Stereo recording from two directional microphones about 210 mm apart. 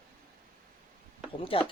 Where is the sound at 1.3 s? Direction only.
25° left (ahead or behind).